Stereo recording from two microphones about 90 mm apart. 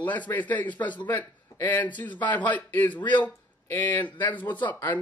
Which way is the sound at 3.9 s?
60° left (ahead or behind).